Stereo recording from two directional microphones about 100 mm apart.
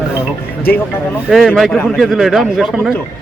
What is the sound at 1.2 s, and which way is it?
A man's voice, 5° right (ahead or behind).